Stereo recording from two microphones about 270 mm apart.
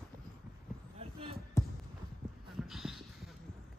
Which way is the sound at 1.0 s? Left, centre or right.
Right.